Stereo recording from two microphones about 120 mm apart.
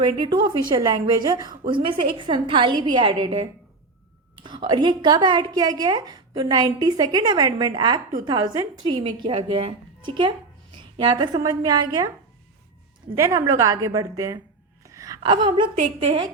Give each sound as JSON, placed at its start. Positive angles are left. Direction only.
{"t": 0.0, "sound": "a woman's voice", "side_deg": -35}
{"t": 13.1, "sound": "a woman's voice", "side_deg": -20}
{"t": 14.8, "sound": "wail", "side_deg": -30}
{"t": 15.2, "sound": "a woman's voice", "side_deg": -40}
{"t": 15.7, "sound": "a woman's voice", "side_deg": -65}